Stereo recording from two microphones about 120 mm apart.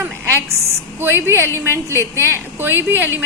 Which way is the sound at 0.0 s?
20° right (ahead or behind).